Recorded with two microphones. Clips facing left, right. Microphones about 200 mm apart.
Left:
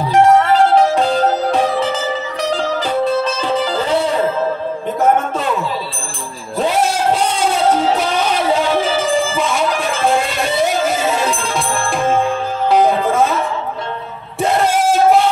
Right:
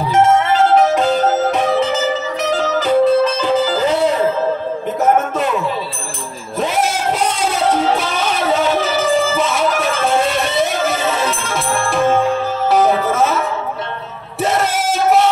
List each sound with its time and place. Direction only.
0.9 s music: 30° left (ahead or behind)
7.2 s music: 30° left (ahead or behind)
9.4 s music: 5° right (ahead or behind)
12.8 s music: 5° right (ahead or behind)